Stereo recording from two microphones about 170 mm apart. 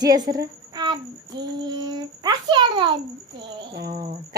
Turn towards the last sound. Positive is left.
turn(degrees=-65)  # may be behind; listen again after turning